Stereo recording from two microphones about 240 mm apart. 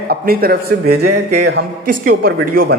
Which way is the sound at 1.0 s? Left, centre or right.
Right.